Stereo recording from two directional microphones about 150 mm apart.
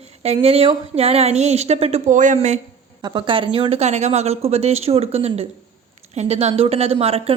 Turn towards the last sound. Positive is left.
turn(degrees=-40)  # may be behind; listen again after turning